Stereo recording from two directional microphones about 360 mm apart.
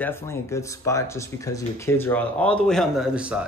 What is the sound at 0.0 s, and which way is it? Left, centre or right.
Speech, centre.